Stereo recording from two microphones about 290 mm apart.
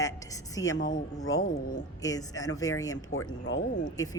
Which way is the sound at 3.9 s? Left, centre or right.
Centre.